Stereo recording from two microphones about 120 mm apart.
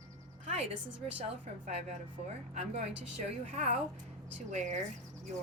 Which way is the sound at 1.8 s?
80° right.